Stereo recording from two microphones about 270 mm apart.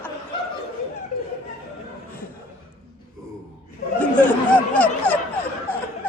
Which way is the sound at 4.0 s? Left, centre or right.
Centre.